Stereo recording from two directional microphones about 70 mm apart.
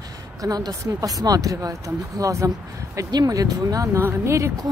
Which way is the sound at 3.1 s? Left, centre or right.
Right.